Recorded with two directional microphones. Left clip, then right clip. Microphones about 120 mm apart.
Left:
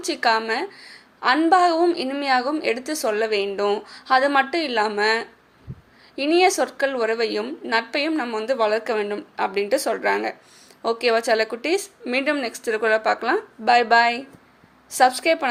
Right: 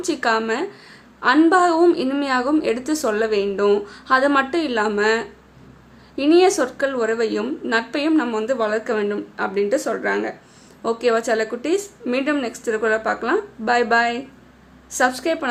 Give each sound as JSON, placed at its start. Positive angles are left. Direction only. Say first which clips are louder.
{"t": 0.0, "sound": "a woman's voice", "louder": "even", "side_deg": 25}